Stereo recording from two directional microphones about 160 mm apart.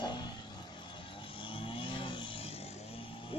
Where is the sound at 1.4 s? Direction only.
35° left (ahead or behind).